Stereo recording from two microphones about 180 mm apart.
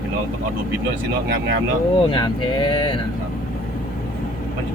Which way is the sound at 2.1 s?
25° left (ahead or behind).